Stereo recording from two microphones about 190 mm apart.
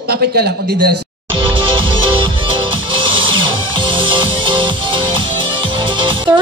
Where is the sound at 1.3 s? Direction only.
25° right (ahead or behind).